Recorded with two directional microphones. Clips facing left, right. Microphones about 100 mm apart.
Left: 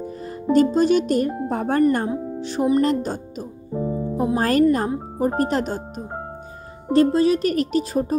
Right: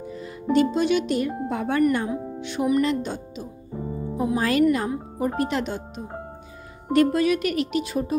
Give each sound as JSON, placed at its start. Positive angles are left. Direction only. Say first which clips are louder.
{"t": 0.0, "sound": "speech", "louder": "left 4 dB", "side_deg": 45}